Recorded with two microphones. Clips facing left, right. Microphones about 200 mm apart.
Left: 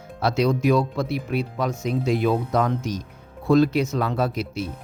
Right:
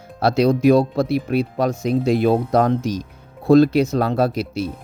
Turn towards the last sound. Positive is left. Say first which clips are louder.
# right 5 dB
turn(degrees=-35)  # may be behind; listen again after turning